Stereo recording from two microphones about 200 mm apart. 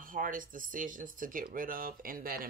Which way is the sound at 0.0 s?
40° right (ahead or behind).